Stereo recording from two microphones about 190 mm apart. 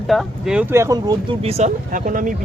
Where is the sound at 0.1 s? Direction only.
Centre (ahead or behind).